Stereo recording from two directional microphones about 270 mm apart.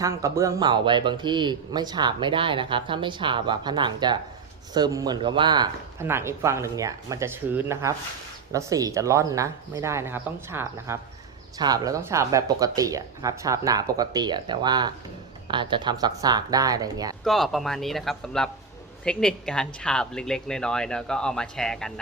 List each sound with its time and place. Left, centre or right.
0.0 s speech: centre
17.2 s speech: centre